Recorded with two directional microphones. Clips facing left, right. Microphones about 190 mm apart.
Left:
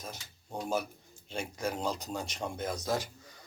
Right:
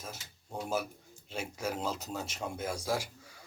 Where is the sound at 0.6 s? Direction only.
5° right (ahead or behind).